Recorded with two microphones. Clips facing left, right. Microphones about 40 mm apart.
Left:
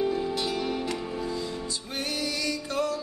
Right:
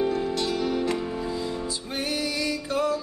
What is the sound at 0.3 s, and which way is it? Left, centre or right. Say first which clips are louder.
Music: right 3 dB; centre.